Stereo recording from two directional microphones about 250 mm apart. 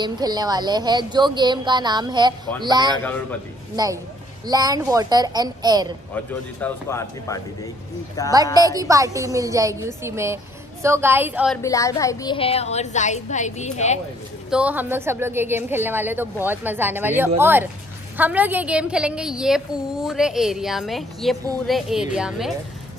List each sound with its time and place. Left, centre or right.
0.0 s speech: centre
3.0 s speech: centre
3.7 s speech: centre
6.1 s speech: centre
8.5 s speech: centre
11.5 s a woman's voice: centre; by 13.9 s left
14.5 s a woman's voice: centre